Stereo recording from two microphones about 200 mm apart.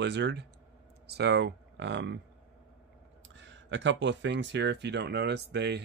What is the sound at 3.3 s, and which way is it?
Speech, 65° right (ahead or behind).